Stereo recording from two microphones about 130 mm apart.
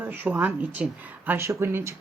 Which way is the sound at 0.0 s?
15° right (ahead or behind).